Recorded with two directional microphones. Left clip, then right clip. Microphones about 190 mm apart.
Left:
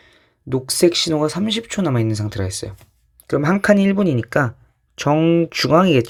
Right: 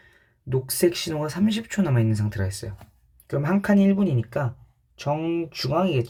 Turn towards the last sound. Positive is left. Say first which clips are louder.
# left 10 dB
turn(degrees=45)  # may be behind; listen again after turning